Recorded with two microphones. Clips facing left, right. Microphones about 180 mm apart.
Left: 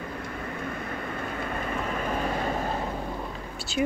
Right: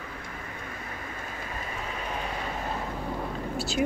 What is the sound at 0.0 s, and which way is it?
Vehicle, 45° left (ahead or behind).